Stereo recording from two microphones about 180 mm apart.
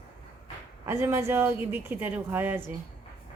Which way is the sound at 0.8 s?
15° right (ahead or behind).